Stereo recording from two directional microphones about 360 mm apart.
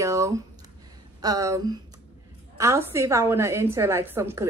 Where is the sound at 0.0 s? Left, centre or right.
Centre.